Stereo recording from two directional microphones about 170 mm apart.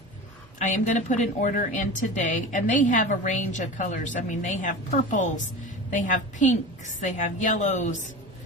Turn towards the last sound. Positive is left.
turn(degrees=45)  # may be behind; listen again after turning